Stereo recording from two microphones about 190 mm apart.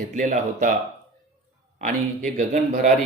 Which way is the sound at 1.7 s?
40° right (ahead or behind).